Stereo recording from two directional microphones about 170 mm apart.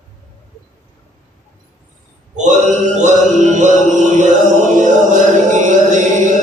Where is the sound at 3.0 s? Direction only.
45° right (ahead or behind).